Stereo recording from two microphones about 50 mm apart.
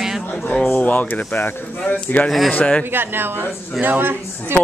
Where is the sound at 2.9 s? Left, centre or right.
Right.